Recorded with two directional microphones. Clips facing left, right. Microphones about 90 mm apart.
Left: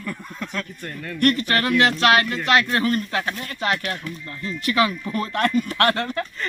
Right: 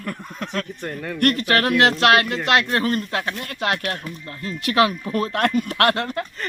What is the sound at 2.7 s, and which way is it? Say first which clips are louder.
Speech: even; 45° right (ahead or behind).